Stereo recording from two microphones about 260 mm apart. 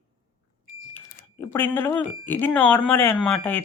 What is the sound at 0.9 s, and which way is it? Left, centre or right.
Speech, centre.